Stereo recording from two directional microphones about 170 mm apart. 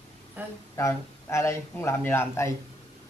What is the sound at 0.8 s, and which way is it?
A man's voice, 15° left (ahead or behind).